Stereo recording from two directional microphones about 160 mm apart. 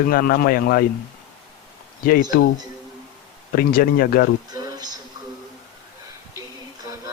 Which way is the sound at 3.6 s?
65° left (ahead or behind).